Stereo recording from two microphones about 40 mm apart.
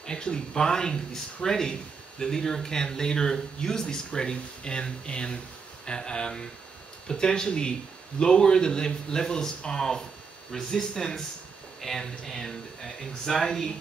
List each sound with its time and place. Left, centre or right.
0.0 s speech: centre